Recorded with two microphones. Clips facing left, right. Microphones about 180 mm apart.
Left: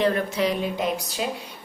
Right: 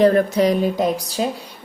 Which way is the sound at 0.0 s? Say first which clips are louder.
Right 8 dB; 45° right (ahead or behind).